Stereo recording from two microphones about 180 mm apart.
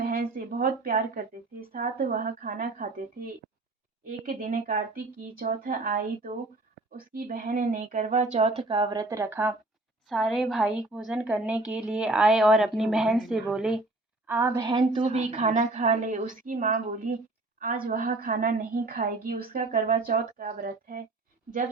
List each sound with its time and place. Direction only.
0.0 s a sound: 55° right (ahead or behind)
1.7 s a woman's voice: 50° right (ahead or behind); by 9.6 s 10° right (ahead or behind)
10.1 s a woman's voice: centre (ahead or behind)
14.3 s a woman's voice: 15° right (ahead or behind); by 21.0 s 50° right (ahead or behind)